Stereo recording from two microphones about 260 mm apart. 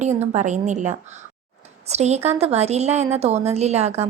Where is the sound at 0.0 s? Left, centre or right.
Right.